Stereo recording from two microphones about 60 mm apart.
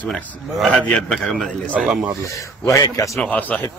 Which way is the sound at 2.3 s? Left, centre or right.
Left.